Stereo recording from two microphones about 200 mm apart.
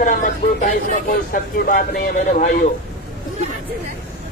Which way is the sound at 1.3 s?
45° left (ahead or behind).